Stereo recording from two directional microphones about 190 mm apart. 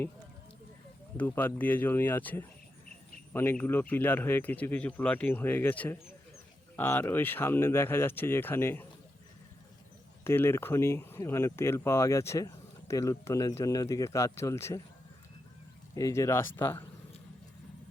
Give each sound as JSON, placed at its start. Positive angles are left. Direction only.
{"t": 1.1, "sound": "speech", "side_deg": 10}
{"t": 10.2, "sound": "speech", "side_deg": 10}
{"t": 16.0, "sound": "speech", "side_deg": 15}